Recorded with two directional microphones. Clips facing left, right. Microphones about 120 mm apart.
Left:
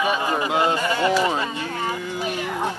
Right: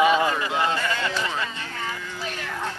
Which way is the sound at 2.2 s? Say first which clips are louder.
Left 5 dB; 15° left (ahead or behind).